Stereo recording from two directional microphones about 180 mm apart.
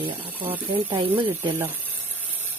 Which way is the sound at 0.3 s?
10° right (ahead or behind).